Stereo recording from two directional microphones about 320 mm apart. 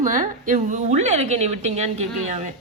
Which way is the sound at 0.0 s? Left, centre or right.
Right.